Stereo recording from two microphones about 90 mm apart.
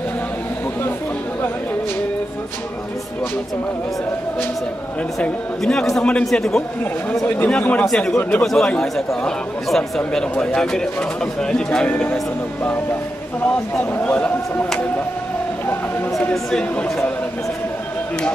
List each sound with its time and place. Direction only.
5.6 s speech: 5° left (ahead or behind)
7.2 s speech: 15° left (ahead or behind)
8.2 s speech: 15° left (ahead or behind)
13.9 s speech: 15° left (ahead or behind)
16.4 s speech: 10° left (ahead or behind)